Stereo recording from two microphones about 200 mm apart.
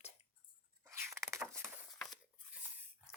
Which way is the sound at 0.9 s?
15° right (ahead or behind).